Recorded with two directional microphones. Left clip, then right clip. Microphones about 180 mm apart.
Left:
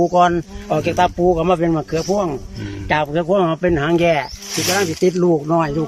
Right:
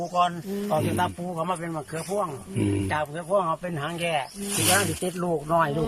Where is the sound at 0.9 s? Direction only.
60° left (ahead or behind); by 4.3 s 45° left (ahead or behind).